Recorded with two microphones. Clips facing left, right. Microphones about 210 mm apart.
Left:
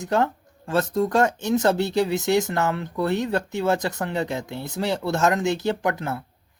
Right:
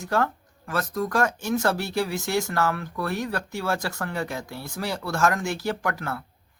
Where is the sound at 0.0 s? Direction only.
20° left (ahead or behind).